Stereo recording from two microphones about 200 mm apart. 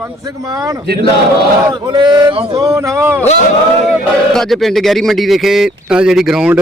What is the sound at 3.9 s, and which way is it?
Speech, centre (ahead or behind).